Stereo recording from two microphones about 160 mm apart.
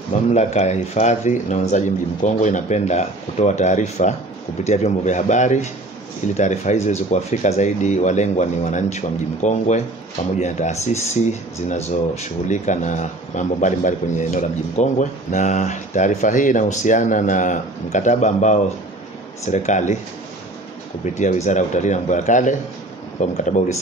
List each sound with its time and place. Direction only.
0.3 s speech: 45° left (ahead or behind)
21.0 s speech: 50° left (ahead or behind)